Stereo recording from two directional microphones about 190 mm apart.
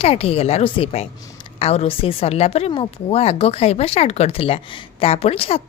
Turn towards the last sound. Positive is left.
turn(degrees=30)  # may be behind; listen again after turning